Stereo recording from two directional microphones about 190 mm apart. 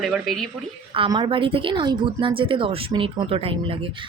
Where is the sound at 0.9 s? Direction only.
25° right (ahead or behind).